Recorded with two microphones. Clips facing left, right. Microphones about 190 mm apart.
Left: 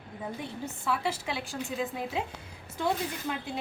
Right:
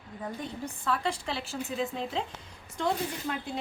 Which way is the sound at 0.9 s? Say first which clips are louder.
Even; 5° left (ahead or behind).